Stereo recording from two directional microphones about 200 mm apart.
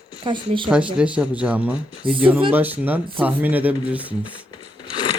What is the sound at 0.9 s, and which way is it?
Speech, 5° right (ahead or behind).